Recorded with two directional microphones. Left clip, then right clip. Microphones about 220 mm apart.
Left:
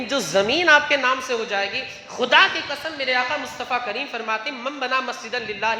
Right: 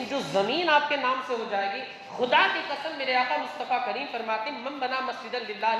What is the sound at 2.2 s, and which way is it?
A woman's voice, 50° left (ahead or behind).